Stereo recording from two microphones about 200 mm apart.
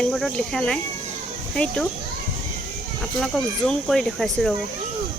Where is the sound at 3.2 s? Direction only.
Centre (ahead or behind).